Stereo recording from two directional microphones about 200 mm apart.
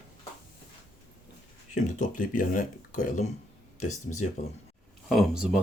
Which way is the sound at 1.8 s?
40° left (ahead or behind).